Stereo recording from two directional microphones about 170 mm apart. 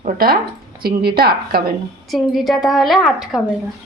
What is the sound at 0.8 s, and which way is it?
Speech, 65° right (ahead or behind).